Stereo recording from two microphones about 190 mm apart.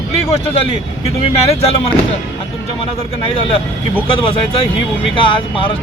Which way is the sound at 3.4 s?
30° left (ahead or behind).